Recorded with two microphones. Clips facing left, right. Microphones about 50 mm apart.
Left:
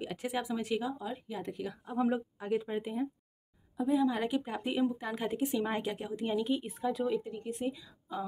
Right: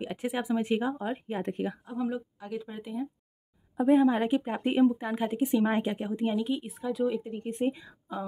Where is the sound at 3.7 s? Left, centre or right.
Right.